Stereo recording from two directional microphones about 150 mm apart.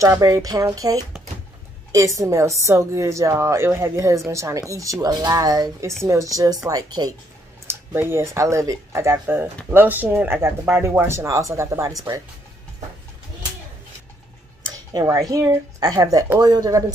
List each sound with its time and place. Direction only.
0.0 s a woman's voice: 20° right (ahead or behind)
14.9 s a woman's voice: 25° right (ahead or behind)